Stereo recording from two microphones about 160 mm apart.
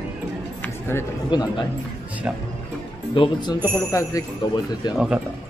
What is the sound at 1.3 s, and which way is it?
Speech, 30° left (ahead or behind).